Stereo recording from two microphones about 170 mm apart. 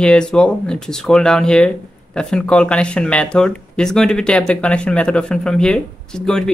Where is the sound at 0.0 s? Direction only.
5° left (ahead or behind).